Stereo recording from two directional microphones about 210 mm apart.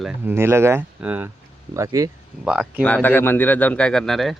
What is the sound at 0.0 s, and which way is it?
Speech, 10° right (ahead or behind).